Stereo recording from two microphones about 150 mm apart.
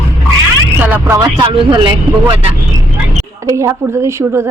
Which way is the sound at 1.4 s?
30° right (ahead or behind).